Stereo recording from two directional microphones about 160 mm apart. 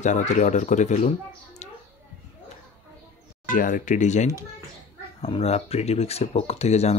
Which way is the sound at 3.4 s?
60° left (ahead or behind).